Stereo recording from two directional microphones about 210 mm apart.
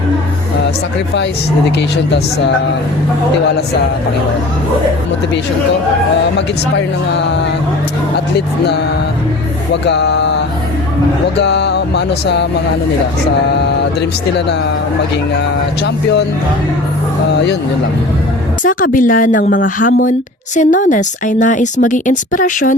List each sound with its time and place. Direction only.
2.0 s music: 55° left (ahead or behind)
6.3 s speech: 55° left (ahead or behind)
8.4 s music: 50° left (ahead or behind)
9.8 s speech: 55° left (ahead or behind)
11.3 s music: 55° left (ahead or behind)
14.3 s music: 55° left (ahead or behind)
15.8 s music: 55° left (ahead or behind)
18.6 s speech: 40° left (ahead or behind)